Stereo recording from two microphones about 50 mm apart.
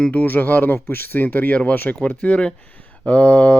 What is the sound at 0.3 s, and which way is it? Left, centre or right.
Speech, left.